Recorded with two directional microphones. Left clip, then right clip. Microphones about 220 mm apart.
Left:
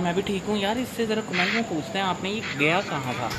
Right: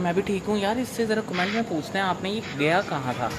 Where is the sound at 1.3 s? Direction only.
5° left (ahead or behind).